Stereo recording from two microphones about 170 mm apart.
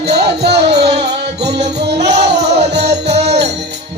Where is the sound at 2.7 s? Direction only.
80° right.